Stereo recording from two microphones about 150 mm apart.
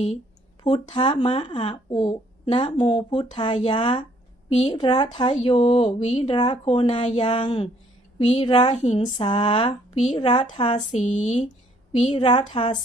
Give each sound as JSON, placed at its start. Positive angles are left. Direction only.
{"t": 0.7, "sound": "speech", "side_deg": 35}
{"t": 4.5, "sound": "a woman's voice", "side_deg": 45}
{"t": 10.9, "sound": "a woman's voice", "side_deg": 50}
{"t": 12.1, "sound": "speech", "side_deg": 30}
{"t": 12.4, "sound": "a woman's voice", "side_deg": 50}